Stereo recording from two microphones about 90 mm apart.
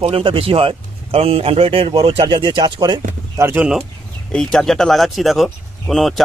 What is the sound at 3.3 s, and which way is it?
Speech, 25° right (ahead or behind).